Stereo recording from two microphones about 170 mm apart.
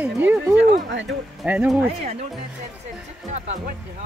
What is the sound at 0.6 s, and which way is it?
Speech, 90° right.